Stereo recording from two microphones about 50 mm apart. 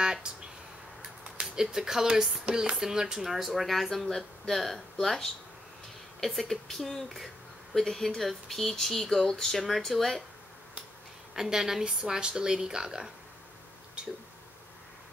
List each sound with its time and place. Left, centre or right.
0.0 s a sound: centre
1.5 s a woman's voice: centre
11.3 s a woman's voice: centre